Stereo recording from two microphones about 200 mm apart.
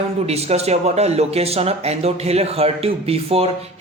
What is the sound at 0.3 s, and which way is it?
Speech, 30° right (ahead or behind).